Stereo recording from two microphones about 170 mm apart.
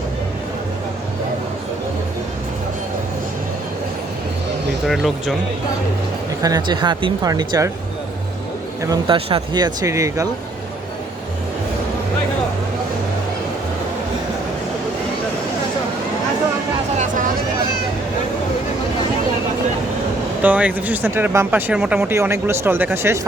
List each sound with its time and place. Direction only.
4.9 s speech: centre (ahead or behind)
6.4 s speech: 25° right (ahead or behind)
8.8 s speech: 20° right (ahead or behind)
20.4 s speech: 10° right (ahead or behind)